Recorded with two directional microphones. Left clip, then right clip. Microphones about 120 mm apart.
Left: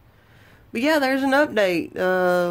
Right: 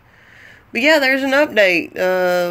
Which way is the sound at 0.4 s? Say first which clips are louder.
Right 7 dB; 25° left (ahead or behind).